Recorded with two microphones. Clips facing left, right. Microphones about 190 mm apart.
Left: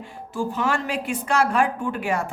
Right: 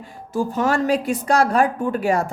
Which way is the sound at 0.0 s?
40° right (ahead or behind).